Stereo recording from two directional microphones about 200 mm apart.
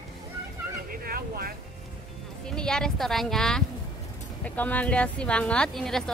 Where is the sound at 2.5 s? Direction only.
5° left (ahead or behind).